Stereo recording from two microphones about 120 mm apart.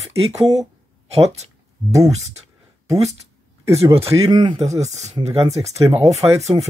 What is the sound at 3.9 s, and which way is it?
Speech, 55° right (ahead or behind).